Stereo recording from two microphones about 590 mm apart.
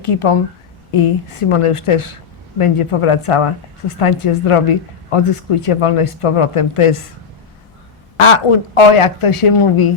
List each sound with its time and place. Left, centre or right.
0.0 s speech: left
8.2 s speech: left